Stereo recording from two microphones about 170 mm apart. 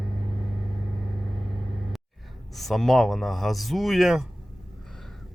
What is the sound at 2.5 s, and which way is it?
Speech, centre (ahead or behind).